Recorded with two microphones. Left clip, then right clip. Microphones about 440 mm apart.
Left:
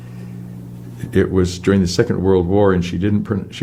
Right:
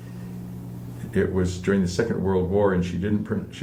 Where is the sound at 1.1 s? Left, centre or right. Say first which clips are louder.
Left 7 dB; left.